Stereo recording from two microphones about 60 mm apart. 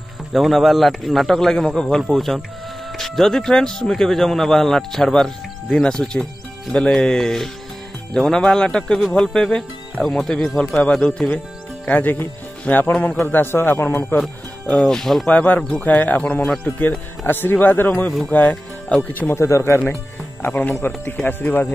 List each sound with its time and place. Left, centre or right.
0.3 s a man's voice: centre
11.2 s a man's voice: left
14.9 s a man's voice: centre
15.2 s a man's voice: left
19.3 s speech: left
20.4 s a man's voice: left